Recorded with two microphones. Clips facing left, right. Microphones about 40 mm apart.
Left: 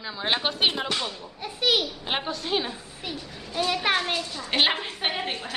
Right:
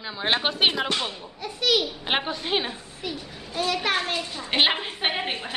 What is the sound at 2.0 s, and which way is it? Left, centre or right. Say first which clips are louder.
Speech: right 3 dB; right.